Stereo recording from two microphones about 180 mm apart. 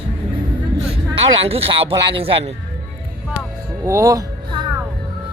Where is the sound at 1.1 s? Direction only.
30° right (ahead or behind).